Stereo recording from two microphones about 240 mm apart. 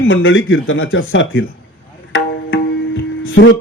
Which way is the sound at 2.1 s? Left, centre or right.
Left.